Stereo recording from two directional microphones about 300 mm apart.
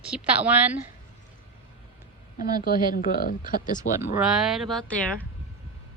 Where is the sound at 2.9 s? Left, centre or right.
Left.